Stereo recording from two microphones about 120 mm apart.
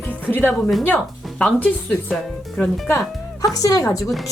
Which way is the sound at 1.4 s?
15° left (ahead or behind).